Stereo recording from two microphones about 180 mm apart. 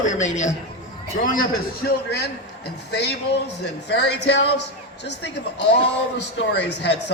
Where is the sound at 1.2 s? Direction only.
55° left (ahead or behind).